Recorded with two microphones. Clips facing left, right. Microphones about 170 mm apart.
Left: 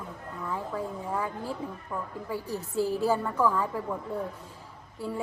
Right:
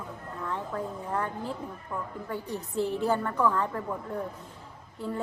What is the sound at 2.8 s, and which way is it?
Speech, 20° right (ahead or behind).